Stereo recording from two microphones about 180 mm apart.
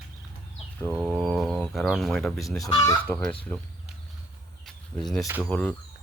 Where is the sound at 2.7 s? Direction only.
15° left (ahead or behind).